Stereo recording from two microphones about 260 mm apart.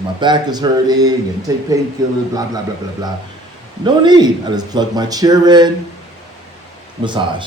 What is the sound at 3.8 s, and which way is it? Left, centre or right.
Speech, centre.